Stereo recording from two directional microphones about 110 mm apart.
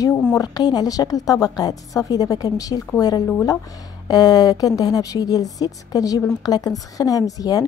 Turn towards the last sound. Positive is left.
turn(degrees=35)  # may be behind; listen again after turning